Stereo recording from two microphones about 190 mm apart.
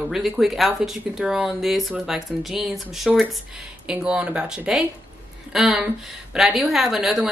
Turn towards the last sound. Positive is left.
turn(degrees=0)  # may be behind; listen again after turning